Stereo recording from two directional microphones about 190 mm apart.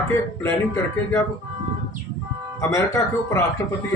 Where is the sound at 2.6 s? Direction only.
15° left (ahead or behind).